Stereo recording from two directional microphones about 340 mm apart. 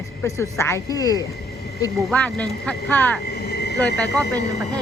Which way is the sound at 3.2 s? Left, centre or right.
Left.